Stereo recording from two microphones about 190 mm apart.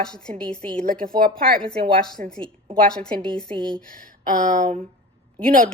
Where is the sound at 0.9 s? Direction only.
50° right (ahead or behind).